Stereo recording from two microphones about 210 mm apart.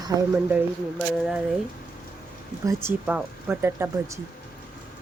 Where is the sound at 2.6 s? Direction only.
10° right (ahead or behind).